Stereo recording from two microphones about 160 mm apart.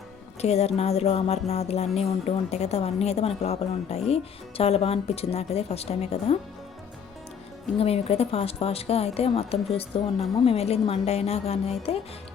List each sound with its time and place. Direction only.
0.4 s music: 40° left (ahead or behind)
7.8 s music: 40° left (ahead or behind)